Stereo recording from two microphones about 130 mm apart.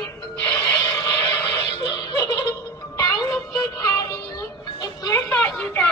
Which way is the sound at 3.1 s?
25° left (ahead or behind).